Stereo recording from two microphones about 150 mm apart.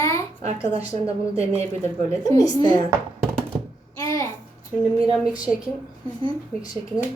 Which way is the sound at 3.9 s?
20° left (ahead or behind).